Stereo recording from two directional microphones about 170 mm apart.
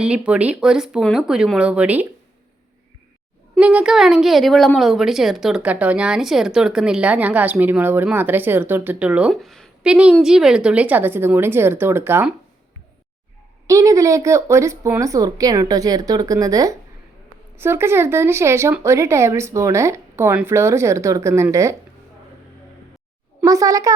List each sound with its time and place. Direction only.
0.0 s speech: 5° right (ahead or behind)
3.6 s a woman's voice: 5° right (ahead or behind)
13.7 s a woman's voice: 20° right (ahead or behind)
23.4 s a woman's voice: 20° right (ahead or behind)